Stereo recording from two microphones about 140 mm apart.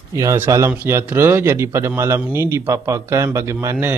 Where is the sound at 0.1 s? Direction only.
20° right (ahead or behind).